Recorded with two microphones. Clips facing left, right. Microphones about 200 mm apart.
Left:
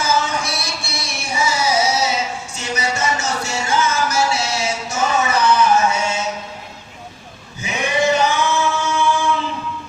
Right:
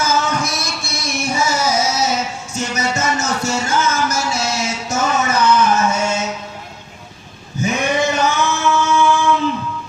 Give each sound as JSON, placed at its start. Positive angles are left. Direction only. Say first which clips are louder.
{"t": 0.0, "sound": "music", "louder": "right 2 dB", "side_deg": -45}
{"t": 7.6, "sound": "male singing", "louder": "right 2 dB", "side_deg": -45}